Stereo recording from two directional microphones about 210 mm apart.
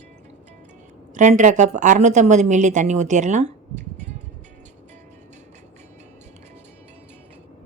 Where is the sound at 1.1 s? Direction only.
35° right (ahead or behind).